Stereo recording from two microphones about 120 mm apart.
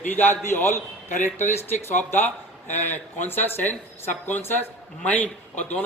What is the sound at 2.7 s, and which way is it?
Speech, 75° left (ahead or behind).